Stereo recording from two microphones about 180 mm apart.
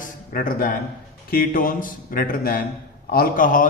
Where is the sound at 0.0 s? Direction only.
50° left (ahead or behind).